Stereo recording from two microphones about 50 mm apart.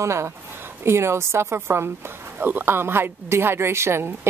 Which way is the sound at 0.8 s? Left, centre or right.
Right.